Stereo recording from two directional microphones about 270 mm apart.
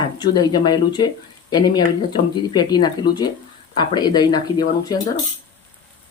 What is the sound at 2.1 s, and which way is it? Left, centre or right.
Speech, centre.